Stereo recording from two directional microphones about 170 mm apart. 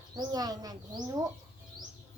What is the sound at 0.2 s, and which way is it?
Speech, 25° right (ahead or behind).